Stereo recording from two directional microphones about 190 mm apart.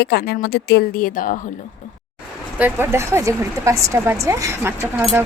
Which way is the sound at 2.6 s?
10° right (ahead or behind).